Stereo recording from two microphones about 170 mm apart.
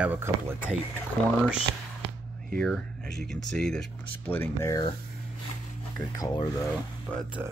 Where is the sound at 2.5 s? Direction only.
5° left (ahead or behind).